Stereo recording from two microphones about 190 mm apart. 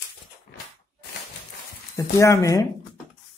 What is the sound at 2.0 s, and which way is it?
Speech, 15° left (ahead or behind).